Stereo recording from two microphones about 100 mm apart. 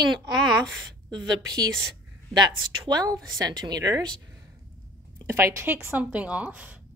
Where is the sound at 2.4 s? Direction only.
45° right (ahead or behind).